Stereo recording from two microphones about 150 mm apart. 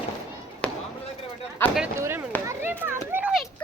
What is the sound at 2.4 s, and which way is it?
Children playing, 15° right (ahead or behind).